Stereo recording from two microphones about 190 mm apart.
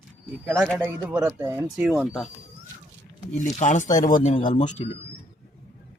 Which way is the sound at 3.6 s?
40° left (ahead or behind).